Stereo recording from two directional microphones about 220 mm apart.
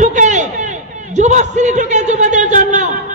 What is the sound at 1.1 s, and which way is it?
A man's voice, 30° right (ahead or behind).